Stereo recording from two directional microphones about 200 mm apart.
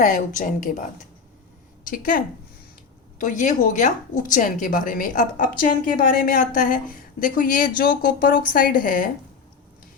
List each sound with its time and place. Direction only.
0.0 s a woman's voice: 40° left (ahead or behind)